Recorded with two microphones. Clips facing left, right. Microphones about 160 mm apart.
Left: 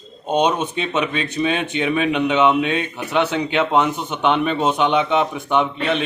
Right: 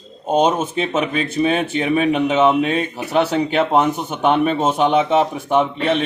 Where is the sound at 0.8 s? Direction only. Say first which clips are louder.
Right 2 dB; 45° right (ahead or behind).